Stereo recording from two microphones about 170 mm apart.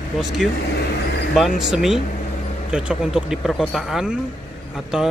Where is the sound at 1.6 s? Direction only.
5° right (ahead or behind).